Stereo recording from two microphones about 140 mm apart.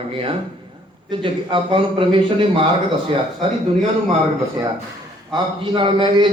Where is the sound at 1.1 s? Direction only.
35° right (ahead or behind).